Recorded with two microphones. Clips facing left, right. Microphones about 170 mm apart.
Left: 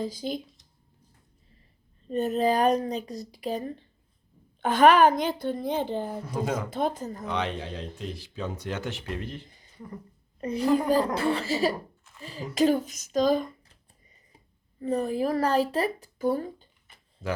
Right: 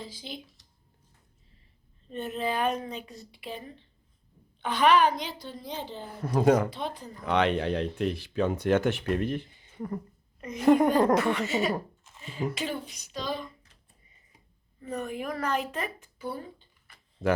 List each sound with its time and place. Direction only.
0.0 s a woman's voice: 45° left (ahead or behind)
2.0 s a woman's voice: 40° left (ahead or behind)
6.4 s speech: 55° right (ahead or behind)
6.7 s a woman's voice: 45° left (ahead or behind)
7.3 s speech: 65° right (ahead or behind)
9.5 s a sound: 40° left (ahead or behind)
10.4 s speech: 35° left (ahead or behind)
12.1 s a sound: 20° right (ahead or behind)
12.5 s a woman's voice: 40° left (ahead or behind)
14.8 s speech: 35° left (ahead or behind)
16.9 s tick-tock: 20° left (ahead or behind)